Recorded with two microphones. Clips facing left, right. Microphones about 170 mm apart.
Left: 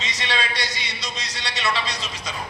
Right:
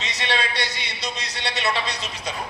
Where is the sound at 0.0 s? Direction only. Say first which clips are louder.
Right 1 dB; 60° right (ahead or behind).